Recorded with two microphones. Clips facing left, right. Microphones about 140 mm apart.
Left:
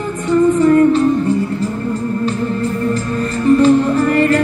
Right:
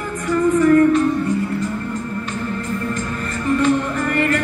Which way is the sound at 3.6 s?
35° left (ahead or behind).